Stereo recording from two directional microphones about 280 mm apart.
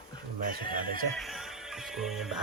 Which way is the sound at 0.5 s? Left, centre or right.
Right.